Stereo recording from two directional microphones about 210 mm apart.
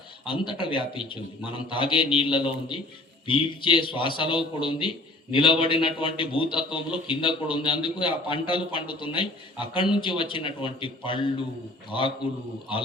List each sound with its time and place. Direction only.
0.3 s a man's voice: 25° left (ahead or behind)